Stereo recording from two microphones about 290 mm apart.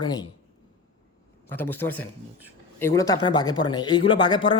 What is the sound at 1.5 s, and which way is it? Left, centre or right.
Speech, centre.